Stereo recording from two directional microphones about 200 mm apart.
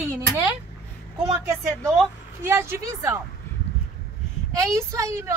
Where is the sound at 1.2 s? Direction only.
15° right (ahead or behind).